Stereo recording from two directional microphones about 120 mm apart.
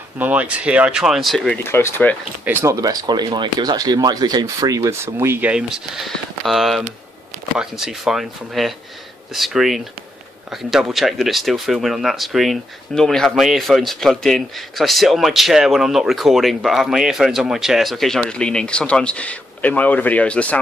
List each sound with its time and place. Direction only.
0.2 s speech: 10° right (ahead or behind)
1.6 s speech: 20° left (ahead or behind)
2.4 s speech: 20° right (ahead or behind)
5.5 s speech: 5° right (ahead or behind); by 20.5 s 10° left (ahead or behind)